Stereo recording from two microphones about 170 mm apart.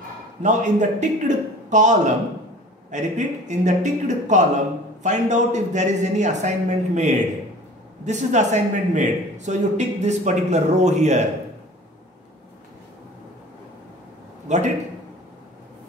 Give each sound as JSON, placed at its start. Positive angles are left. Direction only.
{"t": 0.4, "sound": "a man's voice", "side_deg": -45}
{"t": 14.5, "sound": "a man's voice", "side_deg": -45}